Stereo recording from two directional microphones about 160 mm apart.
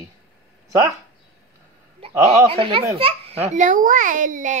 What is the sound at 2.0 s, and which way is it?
A child's voice, 35° right (ahead or behind).